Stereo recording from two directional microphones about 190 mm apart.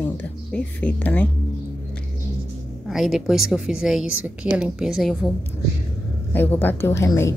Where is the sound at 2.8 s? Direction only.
Centre (ahead or behind).